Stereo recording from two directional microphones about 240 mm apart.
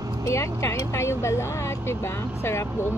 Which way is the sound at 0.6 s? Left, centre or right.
Centre.